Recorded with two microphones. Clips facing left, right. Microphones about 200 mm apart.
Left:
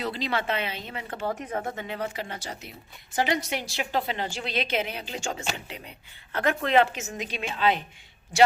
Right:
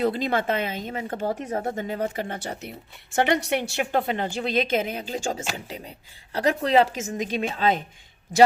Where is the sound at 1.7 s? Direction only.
45° right (ahead or behind).